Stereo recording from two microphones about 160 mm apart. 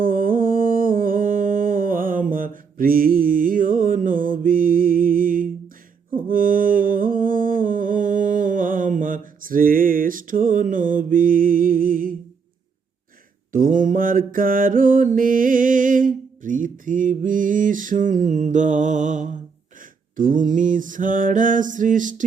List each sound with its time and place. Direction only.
0.0 s a sound: 60° right (ahead or behind)
6.1 s mantra: 60° right (ahead or behind)
13.5 s mantra: 55° right (ahead or behind)